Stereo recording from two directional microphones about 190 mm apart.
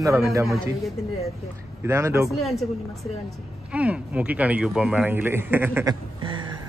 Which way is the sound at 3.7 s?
5° right (ahead or behind).